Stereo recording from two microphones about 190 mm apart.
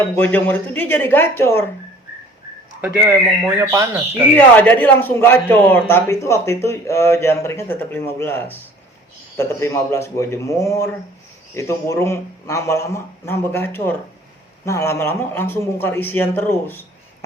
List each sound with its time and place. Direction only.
0.2 s a man's voice: 10° left (ahead or behind)
2.8 s speech: 10° right (ahead or behind)
4.4 s a man's voice: 10° left (ahead or behind)